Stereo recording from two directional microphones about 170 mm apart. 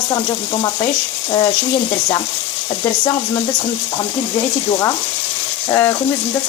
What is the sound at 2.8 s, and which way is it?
Frying, 25° left (ahead or behind).